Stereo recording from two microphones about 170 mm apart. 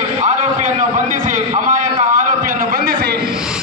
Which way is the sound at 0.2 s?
45° right (ahead or behind).